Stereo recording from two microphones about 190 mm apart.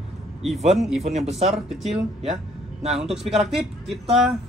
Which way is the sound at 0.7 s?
Centre (ahead or behind).